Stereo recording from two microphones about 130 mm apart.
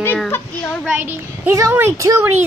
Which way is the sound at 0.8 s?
15° right (ahead or behind).